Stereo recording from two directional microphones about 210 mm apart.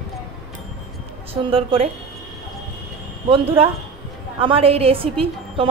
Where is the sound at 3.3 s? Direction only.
25° right (ahead or behind).